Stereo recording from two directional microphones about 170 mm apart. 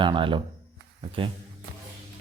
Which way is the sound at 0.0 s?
30° right (ahead or behind).